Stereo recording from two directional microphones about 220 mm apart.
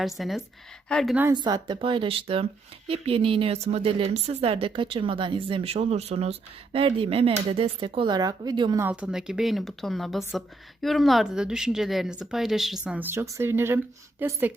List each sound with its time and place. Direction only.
0.0 s speech: centre (ahead or behind)
1.3 s speech: 20° right (ahead or behind)
8.8 s speech: 5° right (ahead or behind)